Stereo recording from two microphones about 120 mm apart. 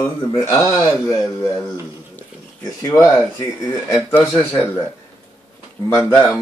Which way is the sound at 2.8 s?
25° left (ahead or behind).